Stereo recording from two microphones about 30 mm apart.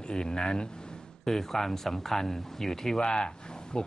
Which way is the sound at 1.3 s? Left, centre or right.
Centre.